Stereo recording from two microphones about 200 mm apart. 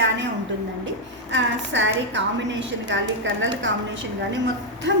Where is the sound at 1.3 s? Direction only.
65° right (ahead or behind).